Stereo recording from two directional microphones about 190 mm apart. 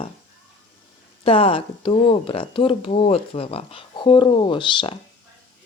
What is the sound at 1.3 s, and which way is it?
Speech, 30° left (ahead or behind).